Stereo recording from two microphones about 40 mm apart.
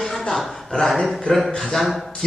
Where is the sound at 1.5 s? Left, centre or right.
Centre.